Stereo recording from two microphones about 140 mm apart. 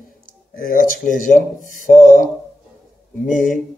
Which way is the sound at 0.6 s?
85° left.